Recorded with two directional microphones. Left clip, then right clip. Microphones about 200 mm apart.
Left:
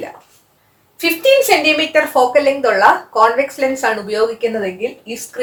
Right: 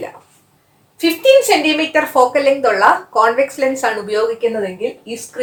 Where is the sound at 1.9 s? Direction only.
20° right (ahead or behind).